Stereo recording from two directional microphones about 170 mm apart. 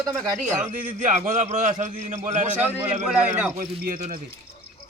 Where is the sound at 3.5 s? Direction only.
55° right (ahead or behind).